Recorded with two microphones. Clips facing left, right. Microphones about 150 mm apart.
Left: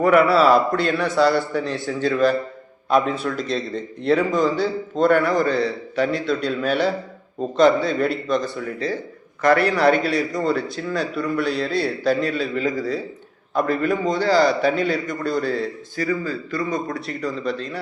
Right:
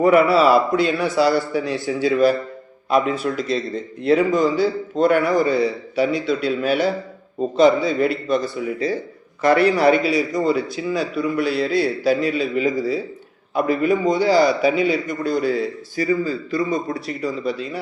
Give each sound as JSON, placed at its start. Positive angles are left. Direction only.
{"t": 0.1, "sound": "a man's voice", "side_deg": 0}
{"t": 9.4, "sound": "a man's voice", "side_deg": -25}
{"t": 9.7, "sound": "a man's voice", "side_deg": 0}
{"t": 16.2, "sound": "a man's voice", "side_deg": -25}
{"t": 17.1, "sound": "a man's voice", "side_deg": 0}